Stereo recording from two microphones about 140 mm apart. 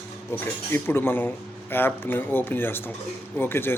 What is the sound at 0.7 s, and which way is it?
Speech, 15° left (ahead or behind).